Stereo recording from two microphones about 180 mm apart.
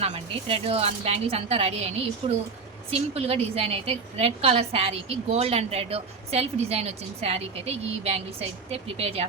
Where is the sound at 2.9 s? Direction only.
35° right (ahead or behind).